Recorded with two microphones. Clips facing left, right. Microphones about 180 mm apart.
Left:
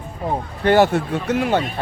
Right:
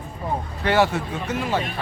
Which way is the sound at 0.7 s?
50° left (ahead or behind).